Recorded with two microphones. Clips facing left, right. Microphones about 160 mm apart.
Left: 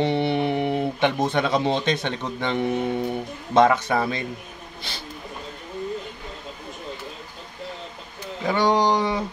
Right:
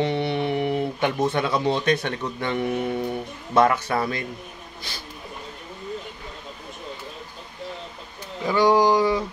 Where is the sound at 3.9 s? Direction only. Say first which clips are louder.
Left 1 dB; 20° left (ahead or behind).